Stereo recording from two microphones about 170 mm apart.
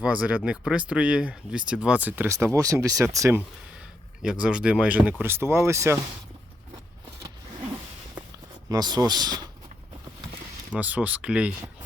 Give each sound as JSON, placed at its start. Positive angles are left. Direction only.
{"t": 0.0, "sound": "speech", "side_deg": -5}
{"t": 4.2, "sound": "speech", "side_deg": -5}
{"t": 8.7, "sound": "speech", "side_deg": -25}
{"t": 10.8, "sound": "speech", "side_deg": -10}